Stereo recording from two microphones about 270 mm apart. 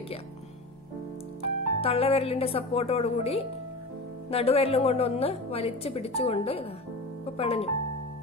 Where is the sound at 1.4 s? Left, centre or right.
Left.